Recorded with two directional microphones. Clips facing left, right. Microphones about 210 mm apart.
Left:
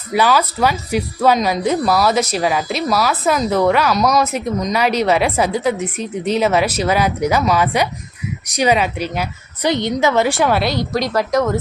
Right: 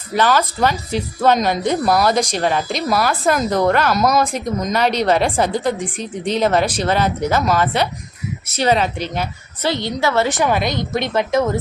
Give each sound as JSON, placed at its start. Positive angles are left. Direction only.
{"t": 0.1, "sound": "a woman's voice", "side_deg": 10}
{"t": 9.6, "sound": "a woman's voice", "side_deg": 20}
{"t": 10.7, "sound": "speech", "side_deg": -20}